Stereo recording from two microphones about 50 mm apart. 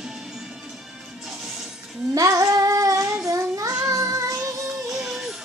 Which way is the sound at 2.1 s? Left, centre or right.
Right.